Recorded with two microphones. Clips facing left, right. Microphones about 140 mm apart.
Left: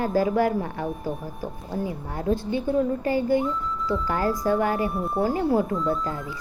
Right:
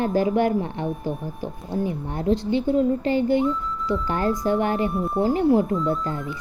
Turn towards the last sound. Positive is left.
turn(degrees=0)  # may be behind; listen again after turning